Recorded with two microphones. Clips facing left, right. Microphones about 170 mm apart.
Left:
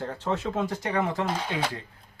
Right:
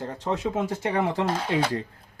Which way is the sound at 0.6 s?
25° right (ahead or behind).